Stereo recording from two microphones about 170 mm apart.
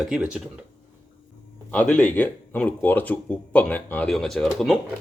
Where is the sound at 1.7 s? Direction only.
5° left (ahead or behind).